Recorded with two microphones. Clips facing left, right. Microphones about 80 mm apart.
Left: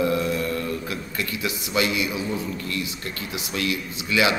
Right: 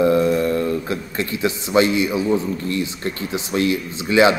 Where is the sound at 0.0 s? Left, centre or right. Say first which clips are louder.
Right 7 dB; right.